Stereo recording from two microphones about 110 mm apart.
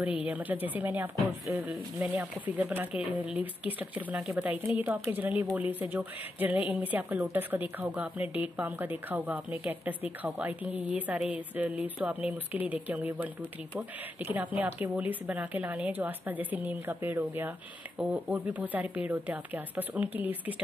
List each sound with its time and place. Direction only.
0.0 s speech: 10° right (ahead or behind)